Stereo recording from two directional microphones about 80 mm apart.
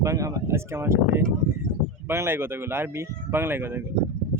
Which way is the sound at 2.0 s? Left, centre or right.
Right.